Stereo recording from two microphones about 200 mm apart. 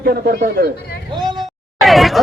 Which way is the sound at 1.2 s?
20° right (ahead or behind).